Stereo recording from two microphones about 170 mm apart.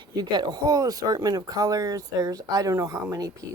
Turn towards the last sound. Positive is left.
turn(degrees=-20)  # may be behind; listen again after turning